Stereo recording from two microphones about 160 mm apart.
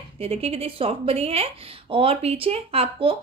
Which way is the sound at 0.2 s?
40° right (ahead or behind).